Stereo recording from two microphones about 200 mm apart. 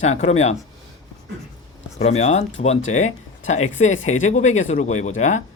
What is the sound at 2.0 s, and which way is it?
Speech, 35° left (ahead or behind).